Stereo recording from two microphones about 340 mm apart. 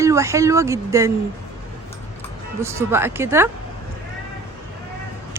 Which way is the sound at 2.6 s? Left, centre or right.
Centre.